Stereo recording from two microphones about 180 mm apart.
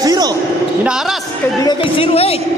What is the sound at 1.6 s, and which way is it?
Speech, 25° left (ahead or behind).